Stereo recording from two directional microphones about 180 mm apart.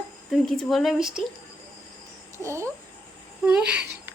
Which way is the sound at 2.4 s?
15° right (ahead or behind).